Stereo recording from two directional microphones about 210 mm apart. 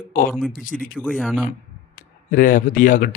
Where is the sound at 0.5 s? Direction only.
40° left (ahead or behind).